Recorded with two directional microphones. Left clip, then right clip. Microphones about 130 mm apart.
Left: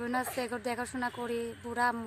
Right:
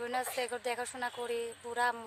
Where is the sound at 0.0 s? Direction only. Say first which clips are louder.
Left 1 dB; 20° right (ahead or behind).